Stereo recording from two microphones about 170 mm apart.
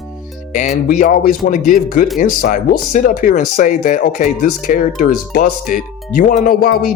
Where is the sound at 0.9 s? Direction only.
50° left (ahead or behind).